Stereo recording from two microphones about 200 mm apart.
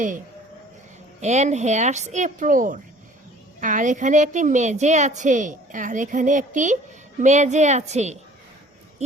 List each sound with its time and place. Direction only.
1.2 s a woman's voice: 35° right (ahead or behind)